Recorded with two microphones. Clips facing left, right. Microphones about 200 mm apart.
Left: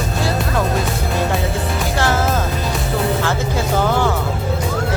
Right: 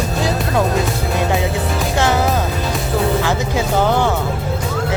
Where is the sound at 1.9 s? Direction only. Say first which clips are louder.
Right 2 dB; 20° right (ahead or behind).